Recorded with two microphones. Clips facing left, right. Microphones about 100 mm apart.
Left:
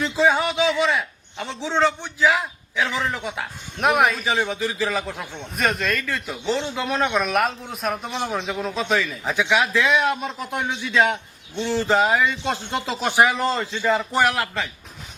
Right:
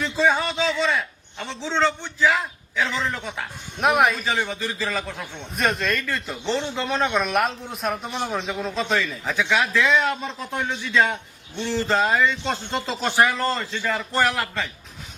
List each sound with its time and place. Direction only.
0.0 s a man's voice: 15° left (ahead or behind)
3.8 s a man's voice: centre (ahead or behind)
4.2 s speech: 15° left (ahead or behind)
5.5 s a man's voice: centre (ahead or behind)
9.2 s speech: 15° left (ahead or behind)